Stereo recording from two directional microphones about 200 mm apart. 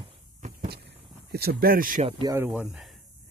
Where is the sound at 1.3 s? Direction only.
50° right (ahead or behind).